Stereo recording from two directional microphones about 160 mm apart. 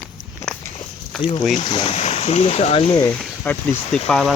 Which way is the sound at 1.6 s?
30° left (ahead or behind).